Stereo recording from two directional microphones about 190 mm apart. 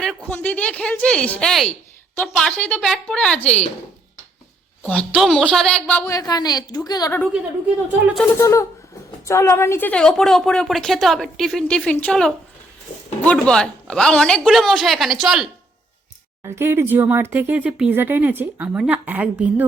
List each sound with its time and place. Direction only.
0.0 s a woman's voice: 5° left (ahead or behind)
4.8 s a woman's voice: 5° left (ahead or behind)
8.4 s a woman's voice: 15° left (ahead or behind); by 15.4 s centre (ahead or behind)
16.4 s speech: 10° right (ahead or behind)